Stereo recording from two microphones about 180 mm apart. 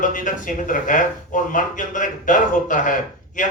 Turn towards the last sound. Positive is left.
turn(degrees=45)  # may be behind; listen again after turning